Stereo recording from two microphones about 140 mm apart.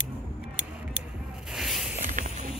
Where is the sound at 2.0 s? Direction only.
65° right (ahead or behind).